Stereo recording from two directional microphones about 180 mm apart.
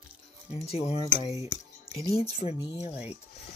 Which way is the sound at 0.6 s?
35° left (ahead or behind).